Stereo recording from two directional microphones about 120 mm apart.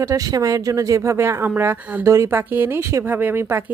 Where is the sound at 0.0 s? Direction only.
25° right (ahead or behind).